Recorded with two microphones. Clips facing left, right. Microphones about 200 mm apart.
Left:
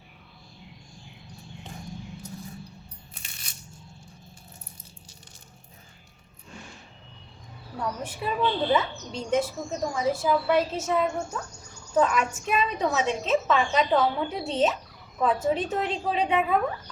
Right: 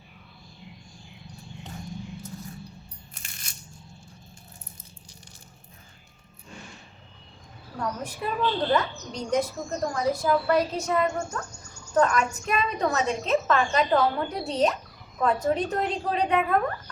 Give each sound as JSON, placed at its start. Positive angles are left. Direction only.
{"t": 7.8, "sound": "a woman's voice", "side_deg": 5}